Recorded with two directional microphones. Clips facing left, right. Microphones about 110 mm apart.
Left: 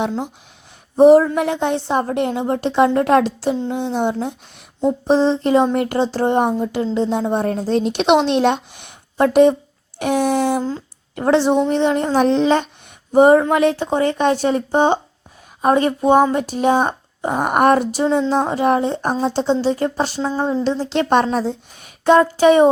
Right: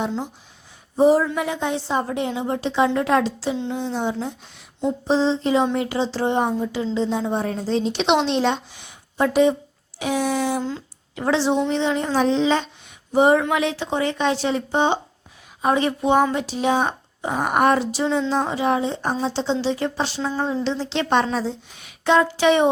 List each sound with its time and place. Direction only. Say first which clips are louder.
0.9 s a woman's voice: left 7 dB; 65° left (ahead or behind)
1.2 s speech: left 4 dB; 45° left (ahead or behind)
1.5 s a woman's voice: left 5 dB; 60° left (ahead or behind)
10.6 s speech: left 4 dB; 40° left (ahead or behind); by 12.6 s 55° left (ahead or behind)
13.1 s speech: left 5 dB; 45° left (ahead or behind)